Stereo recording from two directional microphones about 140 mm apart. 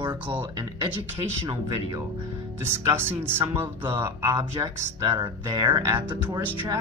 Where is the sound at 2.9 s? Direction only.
15° right (ahead or behind).